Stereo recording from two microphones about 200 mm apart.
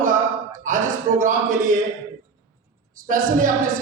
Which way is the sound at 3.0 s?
40° right (ahead or behind).